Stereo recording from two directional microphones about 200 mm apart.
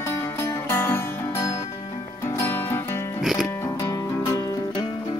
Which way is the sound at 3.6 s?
15° left (ahead or behind).